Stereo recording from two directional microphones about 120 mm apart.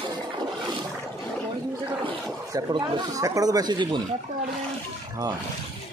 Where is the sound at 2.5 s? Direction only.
35° right (ahead or behind).